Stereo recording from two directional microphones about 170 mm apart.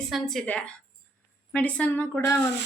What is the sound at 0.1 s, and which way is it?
Speech, centre (ahead or behind).